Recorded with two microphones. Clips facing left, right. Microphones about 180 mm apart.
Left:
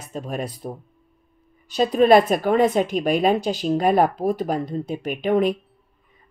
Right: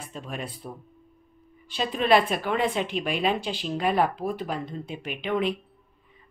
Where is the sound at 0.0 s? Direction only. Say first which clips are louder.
Left 7 dB; 40° left (ahead or behind).